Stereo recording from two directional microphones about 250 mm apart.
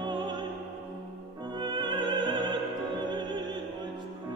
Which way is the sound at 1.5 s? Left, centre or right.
Centre.